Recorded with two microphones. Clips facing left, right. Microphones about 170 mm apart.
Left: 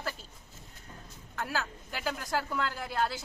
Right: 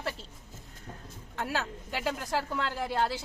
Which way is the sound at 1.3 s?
25° right (ahead or behind).